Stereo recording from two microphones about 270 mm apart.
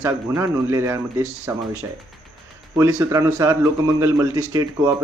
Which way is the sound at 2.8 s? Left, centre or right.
Centre.